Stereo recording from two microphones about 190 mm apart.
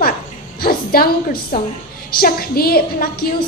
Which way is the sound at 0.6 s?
50° left (ahead or behind).